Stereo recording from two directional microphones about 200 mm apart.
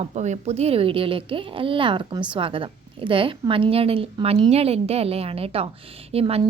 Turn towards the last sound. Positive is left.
turn(degrees=-25)  # may be behind; listen again after turning